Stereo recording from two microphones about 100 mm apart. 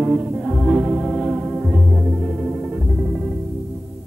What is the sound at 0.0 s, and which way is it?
Organ, 10° right (ahead or behind).